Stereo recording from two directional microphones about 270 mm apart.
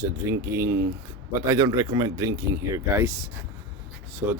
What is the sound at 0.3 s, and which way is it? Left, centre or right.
Speech, centre.